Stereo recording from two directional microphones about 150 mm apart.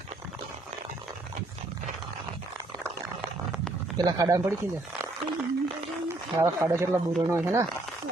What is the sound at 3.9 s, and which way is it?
Speech, 25° right (ahead or behind).